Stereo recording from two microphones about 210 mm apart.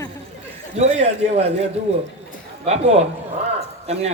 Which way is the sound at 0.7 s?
30° right (ahead or behind).